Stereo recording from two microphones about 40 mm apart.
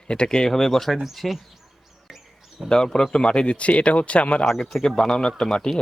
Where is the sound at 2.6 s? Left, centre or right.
Centre.